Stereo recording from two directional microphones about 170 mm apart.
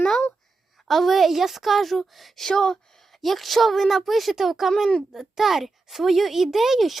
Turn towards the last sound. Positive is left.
turn(degrees=0)  # may be behind; listen again after turning